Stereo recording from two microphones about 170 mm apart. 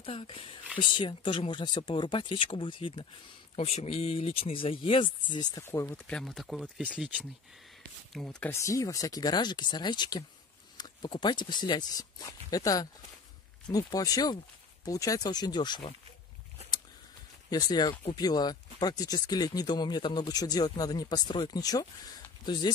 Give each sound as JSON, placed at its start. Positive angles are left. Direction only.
{"t": 0.0, "sound": "speech", "side_deg": 30}
{"t": 8.1, "sound": "speech", "side_deg": 5}
{"t": 17.5, "sound": "speech", "side_deg": 25}